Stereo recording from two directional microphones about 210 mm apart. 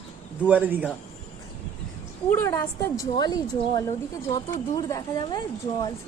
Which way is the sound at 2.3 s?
15° left (ahead or behind).